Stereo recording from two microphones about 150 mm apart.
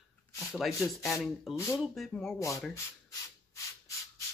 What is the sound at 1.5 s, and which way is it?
Speech, 20° left (ahead or behind).